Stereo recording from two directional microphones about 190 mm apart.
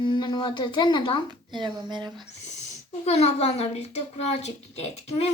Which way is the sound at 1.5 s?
25° right (ahead or behind).